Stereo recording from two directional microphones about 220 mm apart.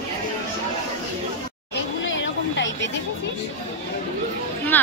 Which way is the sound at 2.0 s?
60° left (ahead or behind).